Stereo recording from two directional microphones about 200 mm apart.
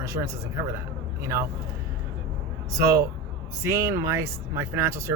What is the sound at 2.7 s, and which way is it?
Speech, 15° right (ahead or behind).